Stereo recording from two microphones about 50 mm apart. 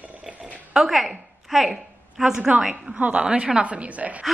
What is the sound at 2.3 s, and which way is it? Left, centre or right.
A woman's voice, right.